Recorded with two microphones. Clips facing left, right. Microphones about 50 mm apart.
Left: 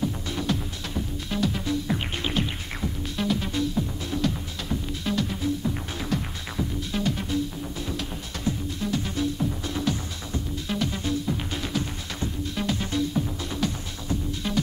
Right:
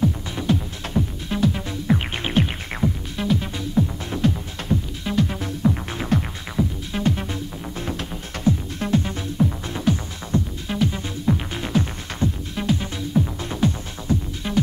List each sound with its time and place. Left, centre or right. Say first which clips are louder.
0.0 s music: right 5 dB; centre
0.8 s music: right 9 dB; right
1.3 s music: right 3 dB; right
2.1 s music: right 5 dB; right
3.2 s music: right 1 dB; centre
4.1 s music: right 4 dB; right
4.6 s music: right 4 dB; centre
5.6 s music: right 7 dB; right
6.6 s music: right 7 dB; centre
7.0 s music: right 3 dB; right
9.0 s music: right 3 dB; right
11.0 s music: right 3 dB; right
12.5 s music: even; centre
13.5 s music: right 5 dB; right